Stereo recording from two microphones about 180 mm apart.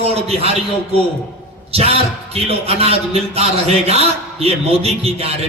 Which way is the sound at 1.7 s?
35° right (ahead or behind).